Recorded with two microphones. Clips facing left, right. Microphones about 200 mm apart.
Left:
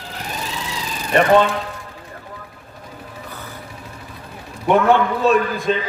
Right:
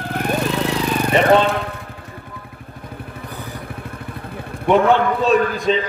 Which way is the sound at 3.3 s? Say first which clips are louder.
Right 4 dB; 15° right (ahead or behind).